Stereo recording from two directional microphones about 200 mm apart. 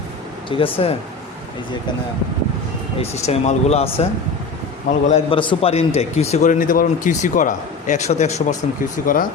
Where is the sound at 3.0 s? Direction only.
30° left (ahead or behind).